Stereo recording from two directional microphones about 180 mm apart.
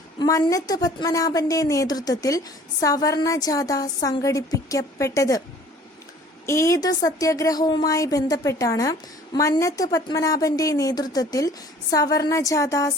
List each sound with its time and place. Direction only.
0.2 s speech: 20° left (ahead or behind)
6.4 s speech: 15° left (ahead or behind)